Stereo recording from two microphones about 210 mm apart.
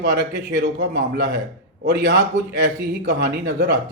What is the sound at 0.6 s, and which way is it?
Speech, 50° right (ahead or behind).